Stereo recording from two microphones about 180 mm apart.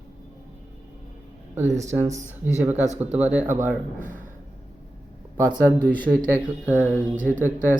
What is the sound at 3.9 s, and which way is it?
Speech, 45° right (ahead or behind).